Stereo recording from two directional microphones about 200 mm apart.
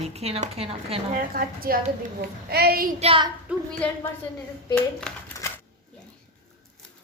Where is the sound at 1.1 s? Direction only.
45° right (ahead or behind).